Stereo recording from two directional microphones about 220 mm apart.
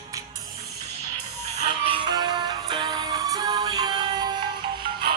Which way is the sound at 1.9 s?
20° right (ahead or behind).